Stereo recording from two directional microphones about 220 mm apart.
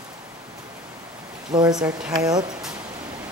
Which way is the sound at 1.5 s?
20° right (ahead or behind).